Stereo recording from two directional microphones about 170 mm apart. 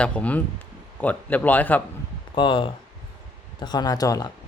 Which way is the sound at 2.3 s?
30° left (ahead or behind).